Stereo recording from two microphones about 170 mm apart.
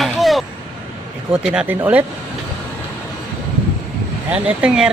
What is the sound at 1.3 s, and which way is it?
Speech, 5° right (ahead or behind).